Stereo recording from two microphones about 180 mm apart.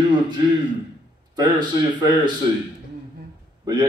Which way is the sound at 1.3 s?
25° right (ahead or behind).